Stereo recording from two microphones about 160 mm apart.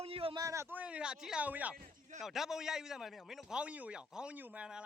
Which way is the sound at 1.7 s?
65° right (ahead or behind).